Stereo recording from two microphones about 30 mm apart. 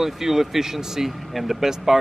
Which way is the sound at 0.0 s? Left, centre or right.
Centre.